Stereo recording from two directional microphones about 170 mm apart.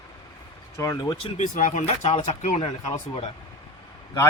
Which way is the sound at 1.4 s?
50° left (ahead or behind).